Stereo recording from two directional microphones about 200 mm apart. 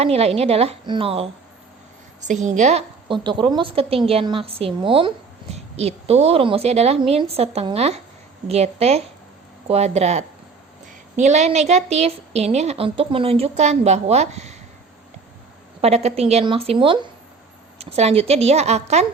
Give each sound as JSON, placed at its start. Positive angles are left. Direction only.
{"t": 0.0, "sound": "a woman's voice", "side_deg": -30}
{"t": 15.8, "sound": "a woman's voice", "side_deg": -30}